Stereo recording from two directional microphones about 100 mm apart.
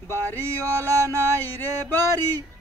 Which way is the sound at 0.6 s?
30° right (ahead or behind).